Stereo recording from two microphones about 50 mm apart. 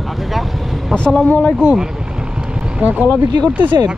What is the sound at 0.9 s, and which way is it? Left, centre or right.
Speech, centre.